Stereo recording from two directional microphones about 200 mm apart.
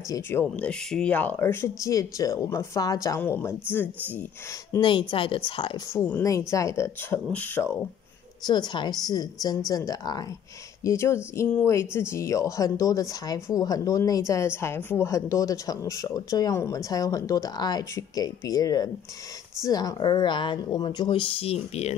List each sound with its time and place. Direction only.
0.1 s speech: 10° left (ahead or behind)
4.7 s a woman's voice: 25° left (ahead or behind)
5.9 s speech: 10° left (ahead or behind)
8.5 s a woman's voice: 20° left (ahead or behind)